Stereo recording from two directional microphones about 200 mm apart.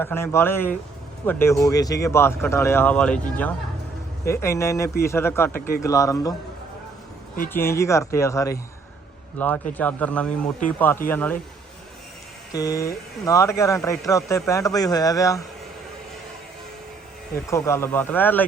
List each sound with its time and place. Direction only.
0.0 s speech: 10° left (ahead or behind)
7.5 s speech: 15° left (ahead or behind)
12.5 s speech: 15° left (ahead or behind)
17.7 s speech: 15° left (ahead or behind)